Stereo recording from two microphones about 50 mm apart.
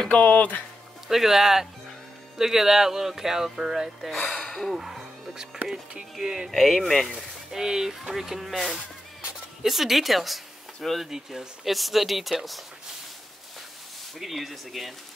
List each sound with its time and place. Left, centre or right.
0.0 s a sound: centre
0.3 s speech: left
1.0 s speech: centre
4.1 s speech: centre
7.1 s speech: centre
8.7 s music: centre
11.1 s speech: centre
14.1 s speech: centre